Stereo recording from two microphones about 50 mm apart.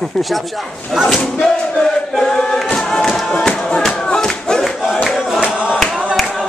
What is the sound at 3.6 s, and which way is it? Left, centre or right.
Music, centre.